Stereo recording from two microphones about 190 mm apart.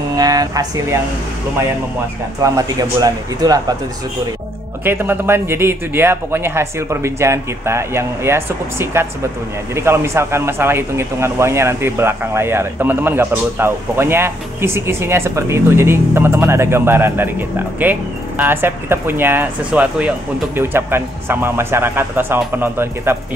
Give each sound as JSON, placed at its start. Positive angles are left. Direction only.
{"t": 0.1, "sound": "speech", "side_deg": -20}
{"t": 2.4, "sound": "speech", "side_deg": -20}
{"t": 4.8, "sound": "speech", "side_deg": -10}